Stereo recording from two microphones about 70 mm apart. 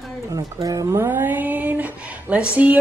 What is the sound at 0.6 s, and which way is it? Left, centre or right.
Speech, right.